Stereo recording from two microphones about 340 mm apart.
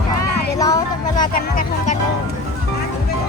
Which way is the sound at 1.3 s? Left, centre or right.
Left.